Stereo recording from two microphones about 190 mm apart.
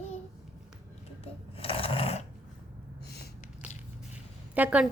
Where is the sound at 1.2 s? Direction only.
30° left (ahead or behind).